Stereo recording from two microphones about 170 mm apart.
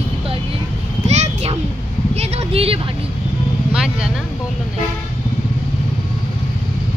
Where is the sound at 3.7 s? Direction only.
5° right (ahead or behind).